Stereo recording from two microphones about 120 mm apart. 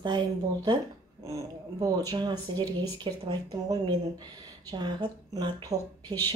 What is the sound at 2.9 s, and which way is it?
Speech, 35° right (ahead or behind).